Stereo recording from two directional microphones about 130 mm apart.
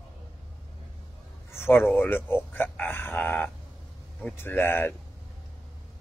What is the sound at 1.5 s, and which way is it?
Speech, 15° left (ahead or behind).